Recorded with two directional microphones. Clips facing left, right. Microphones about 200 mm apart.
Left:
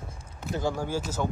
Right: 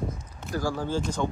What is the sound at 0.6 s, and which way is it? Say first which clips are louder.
Speech: even; 20° left (ahead or behind).